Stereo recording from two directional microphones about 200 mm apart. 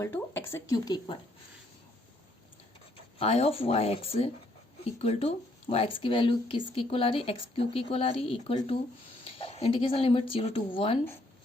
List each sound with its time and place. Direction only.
0.0 s speech: 10° left (ahead or behind)
3.2 s speech: 30° left (ahead or behind)